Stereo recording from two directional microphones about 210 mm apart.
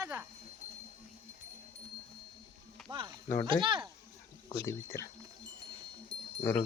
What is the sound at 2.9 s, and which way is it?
Speech, 20° right (ahead or behind).